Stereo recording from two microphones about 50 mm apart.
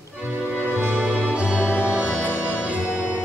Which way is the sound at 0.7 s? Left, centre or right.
Right.